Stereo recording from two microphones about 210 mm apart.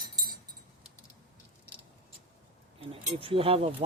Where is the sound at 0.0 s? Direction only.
20° right (ahead or behind).